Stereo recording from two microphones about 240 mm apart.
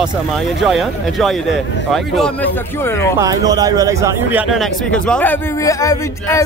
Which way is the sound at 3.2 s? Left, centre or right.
Centre.